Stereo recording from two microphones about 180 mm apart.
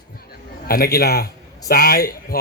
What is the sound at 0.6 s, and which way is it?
A man's voice, 55° left (ahead or behind).